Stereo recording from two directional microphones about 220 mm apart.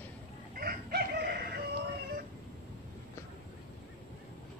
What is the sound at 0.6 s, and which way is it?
Chicken, 45° right (ahead or behind).